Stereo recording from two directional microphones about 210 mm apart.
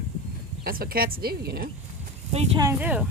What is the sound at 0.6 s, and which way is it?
A woman's voice, 45° right (ahead or behind).